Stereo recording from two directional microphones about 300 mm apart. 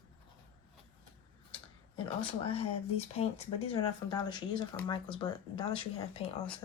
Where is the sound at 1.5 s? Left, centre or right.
Centre.